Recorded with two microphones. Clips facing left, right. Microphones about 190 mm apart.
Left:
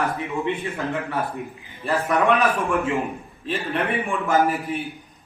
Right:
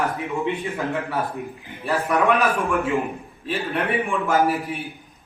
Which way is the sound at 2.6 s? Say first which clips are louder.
Right 1 dB; centre (ahead or behind).